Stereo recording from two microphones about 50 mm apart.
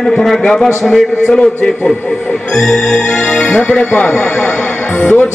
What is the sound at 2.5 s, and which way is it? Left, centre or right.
Speech, centre.